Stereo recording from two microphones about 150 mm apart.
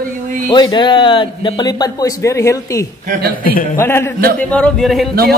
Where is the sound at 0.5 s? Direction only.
30° left (ahead or behind).